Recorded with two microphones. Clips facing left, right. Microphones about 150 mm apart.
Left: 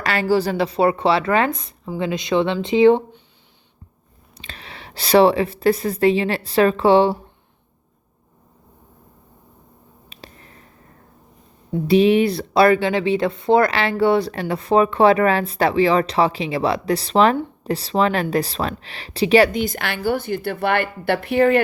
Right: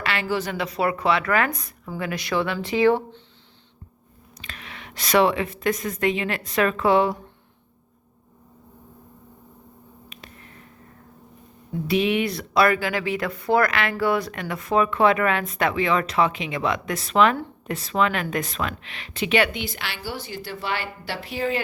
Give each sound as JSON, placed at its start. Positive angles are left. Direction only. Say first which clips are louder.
{"t": 0.0, "sound": "speech", "louder": "left 7 dB", "side_deg": 40}
{"t": 4.4, "sound": "speech", "louder": "left 2 dB", "side_deg": 30}
{"t": 10.1, "sound": "a sound", "louder": "left 6 dB", "side_deg": 30}
{"t": 11.7, "sound": "speech", "louder": "left 7 dB", "side_deg": 30}